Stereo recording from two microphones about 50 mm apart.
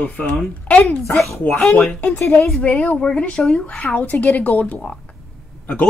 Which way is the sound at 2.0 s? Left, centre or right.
Left.